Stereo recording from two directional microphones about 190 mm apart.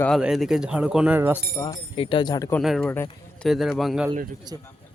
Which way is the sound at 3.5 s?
Centre (ahead or behind).